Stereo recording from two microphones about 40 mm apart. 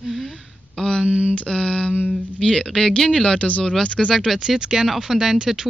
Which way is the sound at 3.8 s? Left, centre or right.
Left.